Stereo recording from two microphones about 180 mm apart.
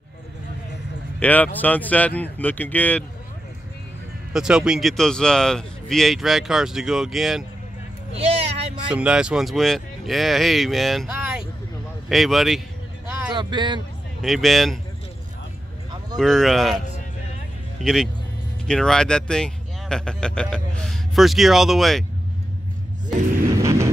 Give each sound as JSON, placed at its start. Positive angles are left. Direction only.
{"t": 1.2, "sound": "speech", "side_deg": 10}
{"t": 4.3, "sound": "speech", "side_deg": -5}
{"t": 8.2, "sound": "vehicle", "side_deg": -35}
{"t": 8.9, "sound": "speech", "side_deg": -5}
{"t": 13.4, "sound": "speech", "side_deg": -25}
{"t": 14.2, "sound": "speech", "side_deg": 0}
{"t": 16.2, "sound": "speech", "side_deg": 0}
{"t": 17.8, "sound": "speech", "side_deg": 0}
{"t": 23.6, "sound": "vehicle", "side_deg": -15}